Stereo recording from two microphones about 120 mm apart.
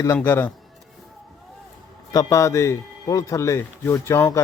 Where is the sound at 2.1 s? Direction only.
25° left (ahead or behind).